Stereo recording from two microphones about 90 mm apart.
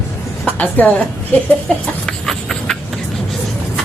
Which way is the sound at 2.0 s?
5° left (ahead or behind).